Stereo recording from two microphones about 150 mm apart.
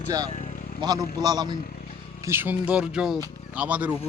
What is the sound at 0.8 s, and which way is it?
Speech, 25° right (ahead or behind).